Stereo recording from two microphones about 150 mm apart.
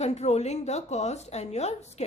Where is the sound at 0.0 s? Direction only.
45° left (ahead or behind).